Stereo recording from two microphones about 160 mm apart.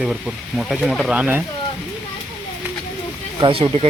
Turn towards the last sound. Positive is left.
turn(degrees=-35)  # may be behind; listen again after turning